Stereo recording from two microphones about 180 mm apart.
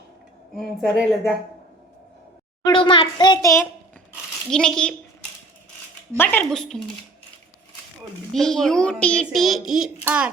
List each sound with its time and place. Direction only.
0.5 s a child's voice: centre (ahead or behind)
2.6 s a child's voice: 25° left (ahead or behind)
4.5 s a child's voice: 5° left (ahead or behind)
6.1 s a child's voice: 10° left (ahead or behind)
8.3 s a child's voice: centre (ahead or behind)